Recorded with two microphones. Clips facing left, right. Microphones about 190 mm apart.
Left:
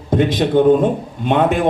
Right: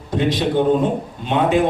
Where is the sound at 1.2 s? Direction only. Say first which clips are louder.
Left 3 dB; 50° left (ahead or behind).